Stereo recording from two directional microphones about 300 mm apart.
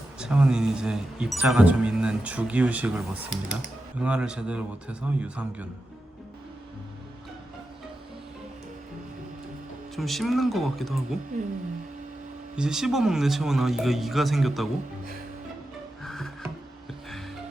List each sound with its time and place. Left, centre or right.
0.2 s speech: centre
9.9 s speech: centre
12.5 s speech: centre
16.0 s music: centre